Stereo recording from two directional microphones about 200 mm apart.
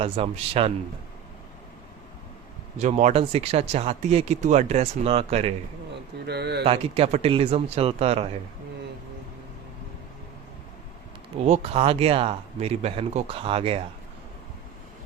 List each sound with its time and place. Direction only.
0.0 s speech: 30° right (ahead or behind)
2.7 s speech: 35° right (ahead or behind)
6.2 s speech: 55° right (ahead or behind)
6.7 s speech: 30° right (ahead or behind)
11.4 s speech: 30° right (ahead or behind)